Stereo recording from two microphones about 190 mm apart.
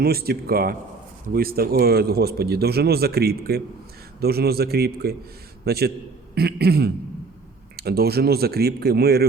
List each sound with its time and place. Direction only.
0.0 s speech: 55° right (ahead or behind)